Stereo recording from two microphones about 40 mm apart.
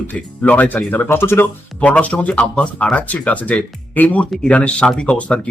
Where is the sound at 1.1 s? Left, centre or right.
Left.